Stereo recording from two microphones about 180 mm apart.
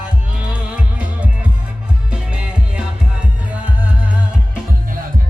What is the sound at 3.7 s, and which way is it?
Music, 10° right (ahead or behind).